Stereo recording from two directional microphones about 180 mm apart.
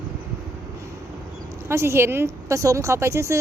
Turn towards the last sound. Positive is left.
turn(degrees=-15)  # may be behind; listen again after turning